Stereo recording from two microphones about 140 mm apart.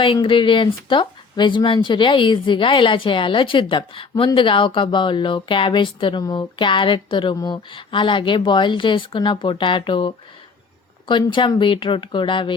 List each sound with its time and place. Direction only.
0.0 s speech: 40° left (ahead or behind)